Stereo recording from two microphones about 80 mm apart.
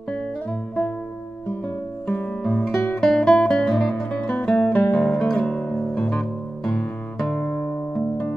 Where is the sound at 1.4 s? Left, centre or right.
Left; by 4.2 s centre.